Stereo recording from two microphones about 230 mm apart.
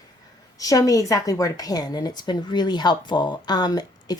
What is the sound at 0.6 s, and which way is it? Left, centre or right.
A woman's voice, centre.